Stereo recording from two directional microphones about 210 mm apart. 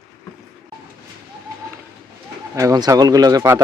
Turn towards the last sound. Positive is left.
turn(degrees=-15)  # may be behind; listen again after turning